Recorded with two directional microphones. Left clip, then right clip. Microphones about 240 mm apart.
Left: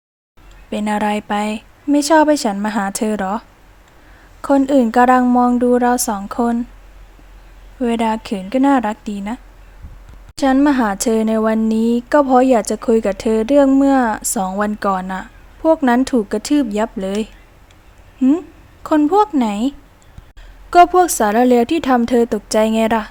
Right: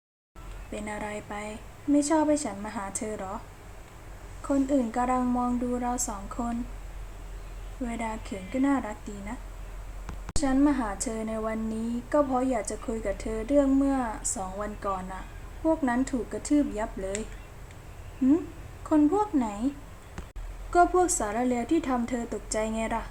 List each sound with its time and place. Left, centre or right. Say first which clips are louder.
0.7 s a woman's voice: left 16 dB; left
4.4 s a woman's voice: left 13 dB; left
7.9 s a woman's voice: left 17 dB; left
10.4 s a woman's voice: left 12 dB; left
18.8 s a woman's voice: left 11 dB; left